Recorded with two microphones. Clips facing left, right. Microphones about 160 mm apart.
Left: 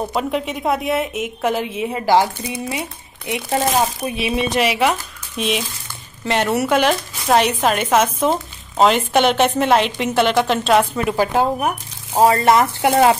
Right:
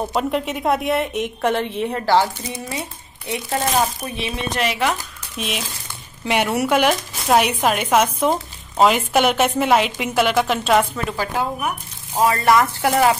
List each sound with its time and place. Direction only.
0.1 s a woman's voice: centre (ahead or behind)
3.3 s speech: 20° left (ahead or behind)
4.2 s a woman's voice: 5° left (ahead or behind)
10.8 s speech: 10° left (ahead or behind)
11.3 s speech: 35° left (ahead or behind)
12.4 s speech: 25° left (ahead or behind)